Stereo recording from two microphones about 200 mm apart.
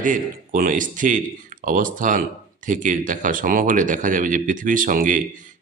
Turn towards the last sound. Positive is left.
turn(degrees=-40)  # may be behind; listen again after turning